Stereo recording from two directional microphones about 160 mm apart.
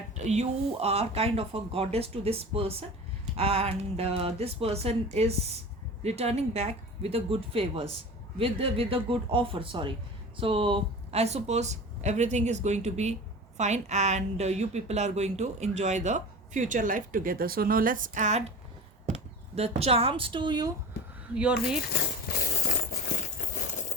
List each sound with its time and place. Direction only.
0.3 s a woman's voice: 40° right (ahead or behind)
21.3 s speech: 5° right (ahead or behind)
22.4 s a sound: 65° left (ahead or behind)
23.4 s coin: 55° left (ahead or behind)